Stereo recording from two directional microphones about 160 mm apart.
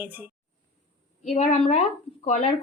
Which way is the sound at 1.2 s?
45° left (ahead or behind).